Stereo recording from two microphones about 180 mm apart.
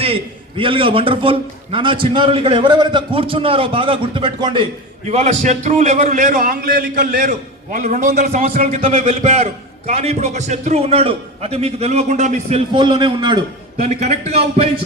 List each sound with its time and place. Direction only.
0.0 s a man's voice: 30° right (ahead or behind)
5.0 s a man's voice: 40° right (ahead or behind)
8.5 s a man's voice: 40° right (ahead or behind)
13.8 s a man's voice: 35° right (ahead or behind)